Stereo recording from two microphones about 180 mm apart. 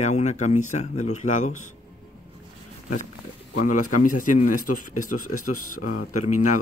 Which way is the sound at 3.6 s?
45° left (ahead or behind).